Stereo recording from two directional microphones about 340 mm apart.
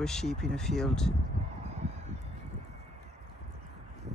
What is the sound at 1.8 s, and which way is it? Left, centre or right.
Fowl, centre.